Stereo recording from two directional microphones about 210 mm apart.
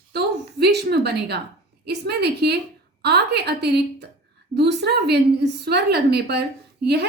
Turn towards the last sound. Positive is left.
turn(degrees=-50)  # may be behind; listen again after turning